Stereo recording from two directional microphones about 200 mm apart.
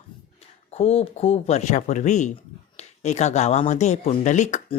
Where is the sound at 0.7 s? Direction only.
30° left (ahead or behind).